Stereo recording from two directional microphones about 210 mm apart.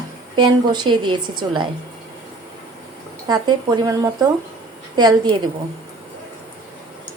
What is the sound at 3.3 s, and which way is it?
A woman's voice, 20° right (ahead or behind).